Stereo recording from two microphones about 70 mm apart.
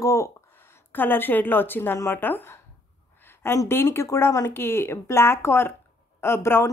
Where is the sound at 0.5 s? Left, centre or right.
Left.